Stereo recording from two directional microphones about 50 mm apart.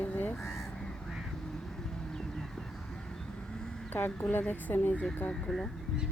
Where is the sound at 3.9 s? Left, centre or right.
Left.